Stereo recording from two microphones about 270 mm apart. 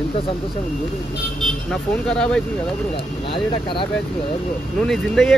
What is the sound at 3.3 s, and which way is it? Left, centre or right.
Speech, centre.